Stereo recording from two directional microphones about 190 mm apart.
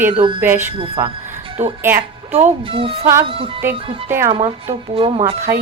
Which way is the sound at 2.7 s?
30° right (ahead or behind).